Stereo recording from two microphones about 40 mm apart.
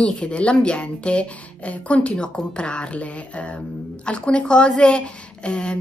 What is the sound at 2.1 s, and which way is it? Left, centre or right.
Speech, left.